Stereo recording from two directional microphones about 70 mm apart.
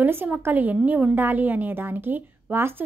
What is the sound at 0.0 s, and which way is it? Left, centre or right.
A woman's voice, right.